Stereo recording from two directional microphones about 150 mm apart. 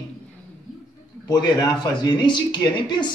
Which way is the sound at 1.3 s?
30° left (ahead or behind).